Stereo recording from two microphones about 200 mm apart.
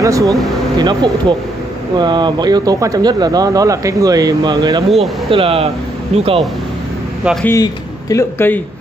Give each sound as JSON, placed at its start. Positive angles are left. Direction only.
{"t": 0.0, "sound": "speech", "side_deg": -15}
{"t": 7.4, "sound": "speech", "side_deg": 15}